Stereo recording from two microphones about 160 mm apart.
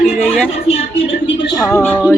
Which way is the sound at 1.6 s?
15° left (ahead or behind).